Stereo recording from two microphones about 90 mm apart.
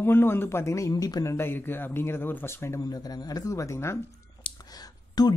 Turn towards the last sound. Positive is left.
turn(degrees=45)  # may be behind; listen again after turning